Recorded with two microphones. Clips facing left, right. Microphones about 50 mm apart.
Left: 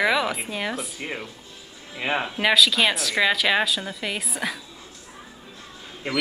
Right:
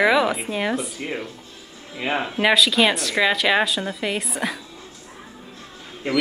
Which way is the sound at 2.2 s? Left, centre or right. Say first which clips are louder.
Right 2 dB; centre.